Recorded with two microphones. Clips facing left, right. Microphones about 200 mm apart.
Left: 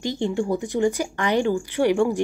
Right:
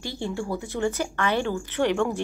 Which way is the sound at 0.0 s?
20° left (ahead or behind).